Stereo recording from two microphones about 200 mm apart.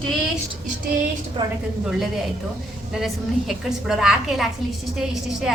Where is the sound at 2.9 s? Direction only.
Centre (ahead or behind).